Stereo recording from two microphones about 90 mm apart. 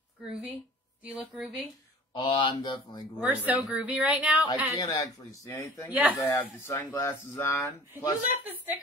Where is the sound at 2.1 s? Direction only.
65° left (ahead or behind).